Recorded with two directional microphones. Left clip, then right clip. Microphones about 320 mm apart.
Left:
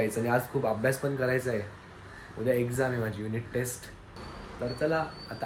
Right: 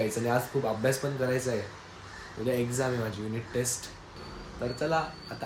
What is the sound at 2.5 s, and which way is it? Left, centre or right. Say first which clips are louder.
Speech: left 2 dB; centre.